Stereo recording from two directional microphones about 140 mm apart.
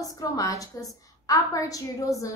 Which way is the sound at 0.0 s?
25° left (ahead or behind).